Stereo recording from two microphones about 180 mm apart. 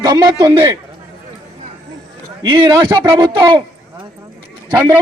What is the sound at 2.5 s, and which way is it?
A man's voice, 30° right (ahead or behind).